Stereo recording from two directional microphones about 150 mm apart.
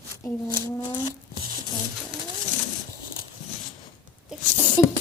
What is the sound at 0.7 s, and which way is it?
Speech, 25° left (ahead or behind).